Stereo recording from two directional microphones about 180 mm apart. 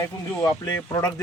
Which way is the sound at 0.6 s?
20° left (ahead or behind).